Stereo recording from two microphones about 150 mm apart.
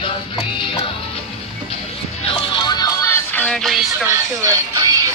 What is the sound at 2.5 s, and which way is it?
Music, 30° left (ahead or behind).